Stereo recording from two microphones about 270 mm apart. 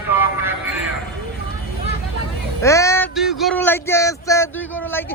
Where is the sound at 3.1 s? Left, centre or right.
Centre.